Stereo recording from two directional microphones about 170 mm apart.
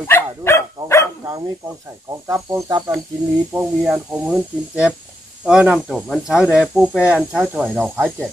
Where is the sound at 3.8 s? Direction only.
5° right (ahead or behind).